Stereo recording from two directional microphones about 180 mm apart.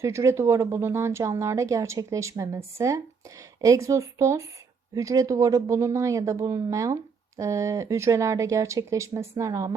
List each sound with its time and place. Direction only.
0.0 s speech: 15° right (ahead or behind)